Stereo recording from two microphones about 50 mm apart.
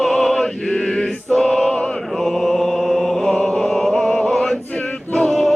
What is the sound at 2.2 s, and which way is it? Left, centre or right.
Music, centre.